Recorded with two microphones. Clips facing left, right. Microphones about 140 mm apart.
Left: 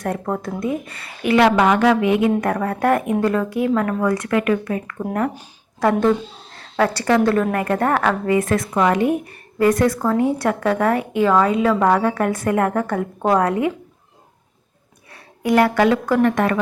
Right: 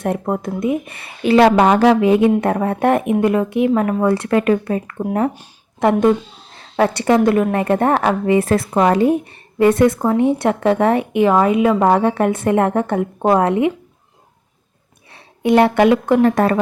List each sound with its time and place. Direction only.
0.0 s a woman's voice: 20° right (ahead or behind)
5.8 s a woman's voice: 15° right (ahead or behind)
15.1 s speech: 25° right (ahead or behind)
16.2 s a woman's voice: 35° right (ahead or behind)